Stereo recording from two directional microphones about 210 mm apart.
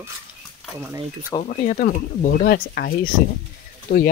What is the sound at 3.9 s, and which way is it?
Speech, 30° left (ahead or behind).